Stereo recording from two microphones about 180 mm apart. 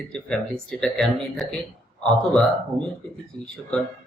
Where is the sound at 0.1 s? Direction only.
5° left (ahead or behind).